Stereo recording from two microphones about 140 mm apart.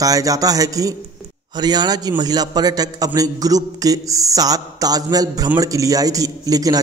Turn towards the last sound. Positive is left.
turn(degrees=-25)  # may be behind; listen again after turning